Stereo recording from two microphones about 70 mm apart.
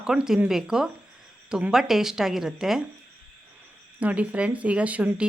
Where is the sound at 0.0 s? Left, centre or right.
Centre.